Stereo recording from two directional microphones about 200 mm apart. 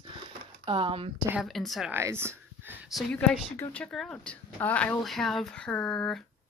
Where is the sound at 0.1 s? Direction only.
25° right (ahead or behind).